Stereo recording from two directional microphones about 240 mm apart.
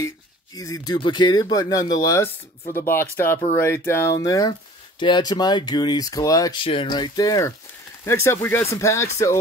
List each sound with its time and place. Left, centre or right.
0.6 s speech: centre